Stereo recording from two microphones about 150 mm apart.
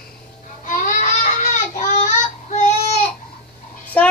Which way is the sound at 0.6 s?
60° left (ahead or behind).